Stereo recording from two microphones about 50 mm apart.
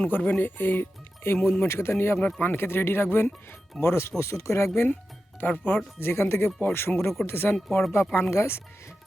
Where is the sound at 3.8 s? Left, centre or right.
Left.